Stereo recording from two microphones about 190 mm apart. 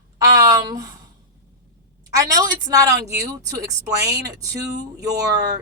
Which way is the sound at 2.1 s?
20° right (ahead or behind).